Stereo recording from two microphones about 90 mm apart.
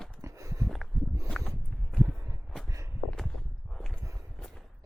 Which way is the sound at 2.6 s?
35° right (ahead or behind).